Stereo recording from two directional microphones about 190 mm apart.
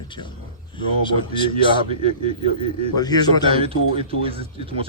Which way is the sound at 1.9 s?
30° right (ahead or behind).